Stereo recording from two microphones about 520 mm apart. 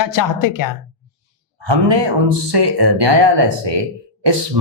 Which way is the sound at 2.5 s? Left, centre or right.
Right.